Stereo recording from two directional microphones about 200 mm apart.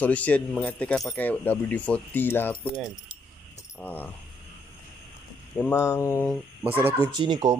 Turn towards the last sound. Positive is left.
turn(degrees=-20)  # may be behind; listen again after turning